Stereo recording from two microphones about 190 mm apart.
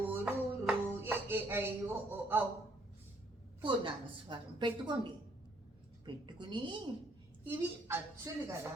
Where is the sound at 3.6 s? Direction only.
25° right (ahead or behind).